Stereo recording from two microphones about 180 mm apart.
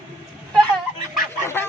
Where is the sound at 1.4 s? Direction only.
15° left (ahead or behind).